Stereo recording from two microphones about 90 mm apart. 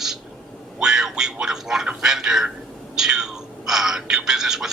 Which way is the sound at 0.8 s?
5° right (ahead or behind).